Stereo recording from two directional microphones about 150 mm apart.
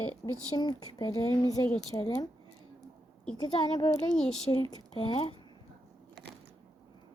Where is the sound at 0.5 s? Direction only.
25° left (ahead or behind).